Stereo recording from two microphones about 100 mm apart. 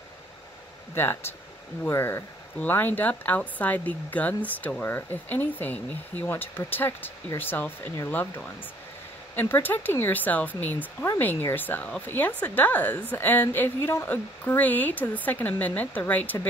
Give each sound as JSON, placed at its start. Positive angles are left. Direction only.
{"t": 0.9, "sound": "speech", "side_deg": 25}